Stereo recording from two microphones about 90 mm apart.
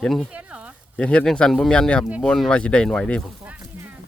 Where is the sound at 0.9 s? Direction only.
10° left (ahead or behind).